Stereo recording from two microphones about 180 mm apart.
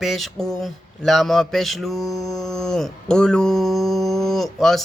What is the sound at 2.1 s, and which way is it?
Mantra, 20° left (ahead or behind).